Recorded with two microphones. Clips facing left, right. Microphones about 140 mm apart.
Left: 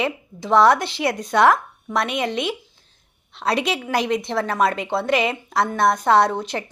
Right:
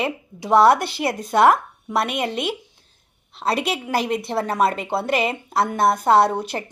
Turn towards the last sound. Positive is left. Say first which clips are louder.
# right 1 dB
turn(degrees=-10)  # may be behind; listen again after turning